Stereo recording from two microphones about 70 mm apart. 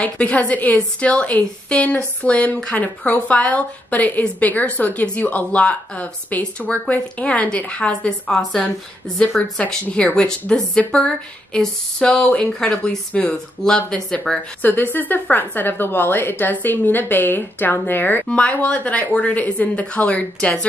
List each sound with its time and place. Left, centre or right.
0.0 s a woman's voice: centre
8.4 s a woman's voice: centre
14.6 s a woman's voice: left
18.2 s a woman's voice: centre